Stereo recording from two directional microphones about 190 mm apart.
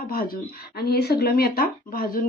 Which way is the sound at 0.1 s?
50° left (ahead or behind).